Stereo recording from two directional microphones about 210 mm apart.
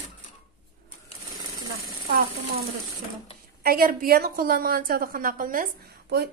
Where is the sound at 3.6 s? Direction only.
45° right (ahead or behind).